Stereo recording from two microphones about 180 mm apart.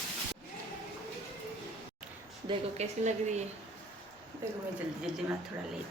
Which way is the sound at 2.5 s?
40° right (ahead or behind).